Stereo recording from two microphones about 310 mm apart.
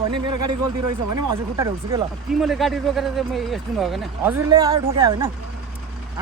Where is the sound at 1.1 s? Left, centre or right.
Centre.